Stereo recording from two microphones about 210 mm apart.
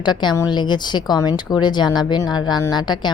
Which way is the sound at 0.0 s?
20° left (ahead or behind).